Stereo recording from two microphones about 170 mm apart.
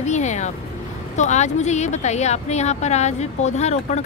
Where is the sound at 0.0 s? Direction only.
45° left (ahead or behind).